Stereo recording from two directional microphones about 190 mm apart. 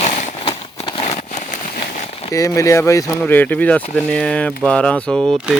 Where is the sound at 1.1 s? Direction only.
40° left (ahead or behind).